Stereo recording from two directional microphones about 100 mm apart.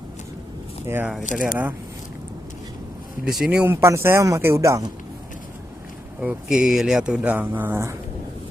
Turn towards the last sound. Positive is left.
turn(degrees=-20)  # may be behind; listen again after turning